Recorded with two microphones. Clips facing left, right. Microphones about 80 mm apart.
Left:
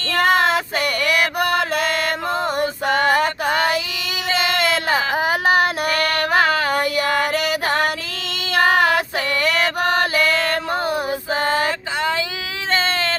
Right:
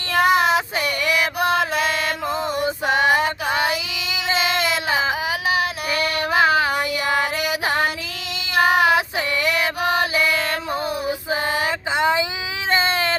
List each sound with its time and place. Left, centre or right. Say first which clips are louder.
0.1 s child singing: even; centre
0.8 s music: left 2 dB; left
2.6 s female singing: even; centre
3.1 s female singing: left 1 dB; left
4.4 s child singing: left 3 dB; left
6.7 s female singing: left 2 dB; left
8.5 s child singing: even; centre
9.4 s music: left 3 dB; left
10.7 s child singing: left 3 dB; left
11.3 s female singing: left 3 dB; centre
12.7 s baby cry: right 1 dB; centre